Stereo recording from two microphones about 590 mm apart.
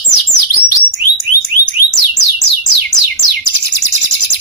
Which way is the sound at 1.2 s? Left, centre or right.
Left.